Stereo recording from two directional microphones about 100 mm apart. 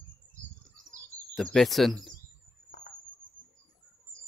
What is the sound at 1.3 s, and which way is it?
Speech, centre (ahead or behind).